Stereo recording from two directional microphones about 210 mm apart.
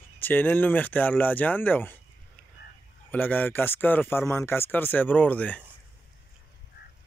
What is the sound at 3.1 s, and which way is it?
Speech, 10° left (ahead or behind).